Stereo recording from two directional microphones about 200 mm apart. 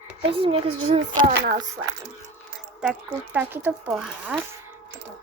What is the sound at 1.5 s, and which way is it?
Speech, 40° right (ahead or behind).